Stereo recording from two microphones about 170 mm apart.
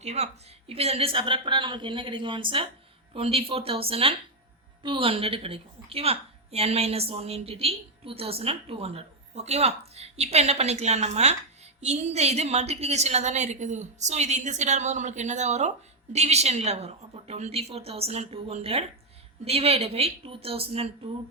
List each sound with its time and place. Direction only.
0.0 s a woman's voice: 40° right (ahead or behind)